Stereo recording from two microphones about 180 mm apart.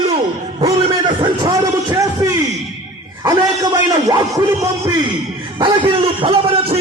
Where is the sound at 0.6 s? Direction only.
35° right (ahead or behind).